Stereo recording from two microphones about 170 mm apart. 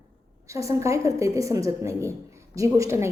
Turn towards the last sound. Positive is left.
turn(degrees=-15)  # may be behind; listen again after turning